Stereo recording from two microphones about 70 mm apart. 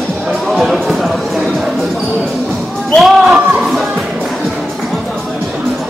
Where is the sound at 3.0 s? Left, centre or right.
Centre.